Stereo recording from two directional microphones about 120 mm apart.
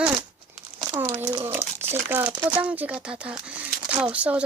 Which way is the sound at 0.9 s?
25° right (ahead or behind).